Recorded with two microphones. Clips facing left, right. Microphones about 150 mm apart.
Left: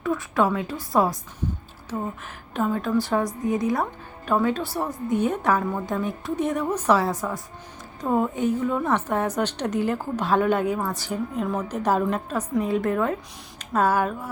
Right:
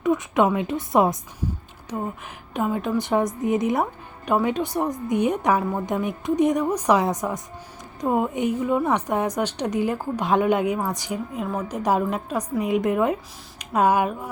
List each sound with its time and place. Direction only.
0.0 s a woman's voice: 20° right (ahead or behind)
2.5 s a woman's voice: 15° right (ahead or behind)